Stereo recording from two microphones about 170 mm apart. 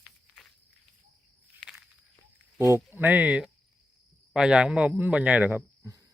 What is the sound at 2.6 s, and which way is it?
Speech, 15° right (ahead or behind).